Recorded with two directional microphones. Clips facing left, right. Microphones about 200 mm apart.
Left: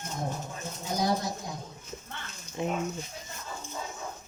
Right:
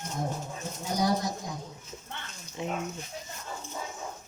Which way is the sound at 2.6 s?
50° left (ahead or behind).